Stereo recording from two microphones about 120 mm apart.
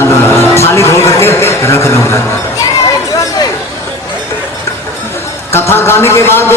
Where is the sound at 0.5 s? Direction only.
25° left (ahead or behind).